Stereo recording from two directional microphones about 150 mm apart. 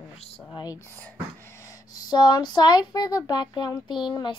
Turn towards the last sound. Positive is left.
turn(degrees=30)  # may be behind; listen again after turning